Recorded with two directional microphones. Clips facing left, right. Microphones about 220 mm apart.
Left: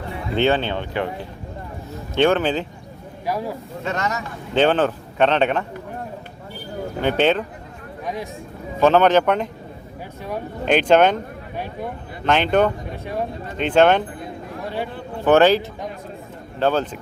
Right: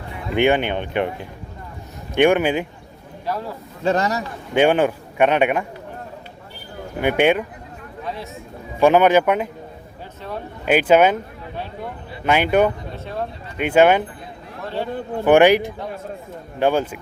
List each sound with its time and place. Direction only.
0.3 s a man's voice: 15° right (ahead or behind)
3.2 s speech: 10° left (ahead or behind)
3.8 s speech: 35° right (ahead or behind)
4.5 s a man's voice: 10° right (ahead or behind)
7.0 s a man's voice: 10° right (ahead or behind)
8.0 s speech: 15° left (ahead or behind)
8.8 s a man's voice: 10° right (ahead or behind)
10.7 s a man's voice: 5° right (ahead or behind)
12.2 s a man's voice: 10° right (ahead or behind)
12.9 s speech: 15° left (ahead or behind)
13.6 s a man's voice: 10° right (ahead or behind)
14.6 s a man's voice: 15° left (ahead or behind)
15.2 s a man's voice: 15° right (ahead or behind)